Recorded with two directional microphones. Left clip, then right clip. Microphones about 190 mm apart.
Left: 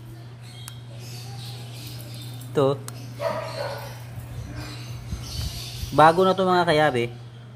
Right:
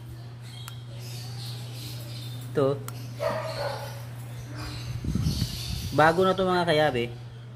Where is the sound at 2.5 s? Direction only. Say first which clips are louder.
Left 4 dB; 20° left (ahead or behind).